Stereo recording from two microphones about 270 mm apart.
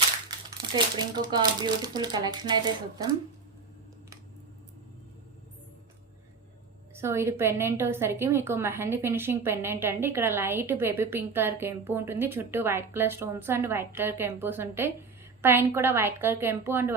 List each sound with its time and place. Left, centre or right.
0.9 s a woman's voice: centre
6.9 s a woman's voice: centre